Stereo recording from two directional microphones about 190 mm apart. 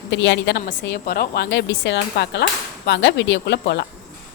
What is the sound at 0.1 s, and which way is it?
A woman's voice, 70° left (ahead or behind).